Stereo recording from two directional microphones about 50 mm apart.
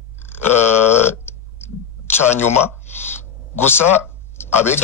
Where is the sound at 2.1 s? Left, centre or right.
Left.